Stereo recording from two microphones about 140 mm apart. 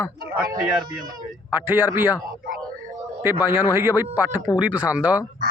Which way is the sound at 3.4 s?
15° right (ahead or behind).